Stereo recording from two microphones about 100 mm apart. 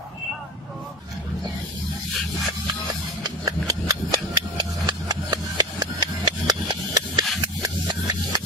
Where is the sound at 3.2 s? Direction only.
40° right (ahead or behind).